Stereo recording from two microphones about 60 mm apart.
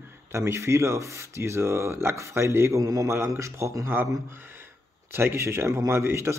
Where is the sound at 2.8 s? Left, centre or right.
Right.